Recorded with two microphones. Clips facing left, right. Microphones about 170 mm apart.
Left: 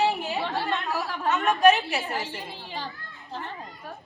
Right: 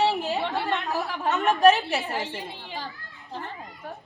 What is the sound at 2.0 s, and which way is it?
Speech, 20° right (ahead or behind).